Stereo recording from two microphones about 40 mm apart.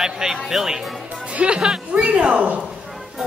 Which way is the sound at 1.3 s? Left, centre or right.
Right.